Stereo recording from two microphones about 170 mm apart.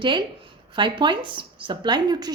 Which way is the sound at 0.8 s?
25° right (ahead or behind).